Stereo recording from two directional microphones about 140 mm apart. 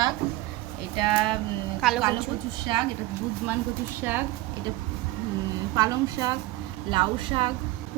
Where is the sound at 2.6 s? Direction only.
30° right (ahead or behind).